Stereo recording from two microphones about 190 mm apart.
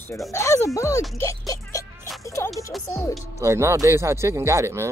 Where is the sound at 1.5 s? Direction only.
15° left (ahead or behind).